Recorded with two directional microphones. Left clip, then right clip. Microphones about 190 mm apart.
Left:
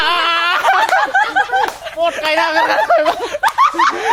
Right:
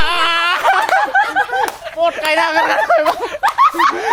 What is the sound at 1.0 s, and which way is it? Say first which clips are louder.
Snicker: even; 20° left (ahead or behind).